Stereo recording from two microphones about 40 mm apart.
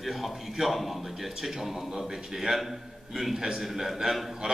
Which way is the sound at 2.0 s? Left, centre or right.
Centre.